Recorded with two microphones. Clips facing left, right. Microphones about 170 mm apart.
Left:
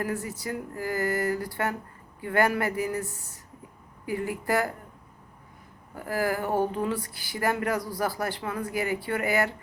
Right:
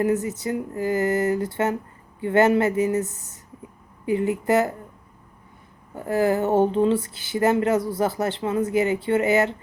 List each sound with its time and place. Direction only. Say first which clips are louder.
0.0 s speech: right 9 dB; 20° right (ahead or behind)
5.9 s speech: right 7 dB; 25° right (ahead or behind)